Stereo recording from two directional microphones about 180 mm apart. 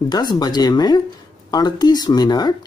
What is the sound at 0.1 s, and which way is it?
Speech, 20° left (ahead or behind).